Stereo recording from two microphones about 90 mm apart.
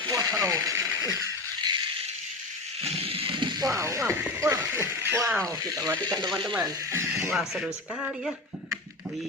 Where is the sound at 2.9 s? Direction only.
90° right; by 3.6 s 60° right (ahead or behind).